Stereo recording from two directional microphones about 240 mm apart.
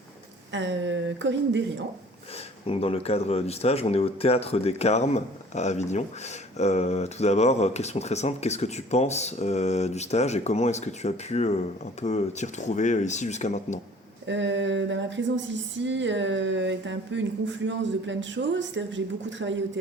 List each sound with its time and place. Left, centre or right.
0.5 s speech: right
2.6 s speech: left
14.3 s speech: right